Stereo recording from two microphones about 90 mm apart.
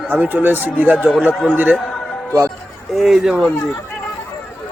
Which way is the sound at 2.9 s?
Centre (ahead or behind).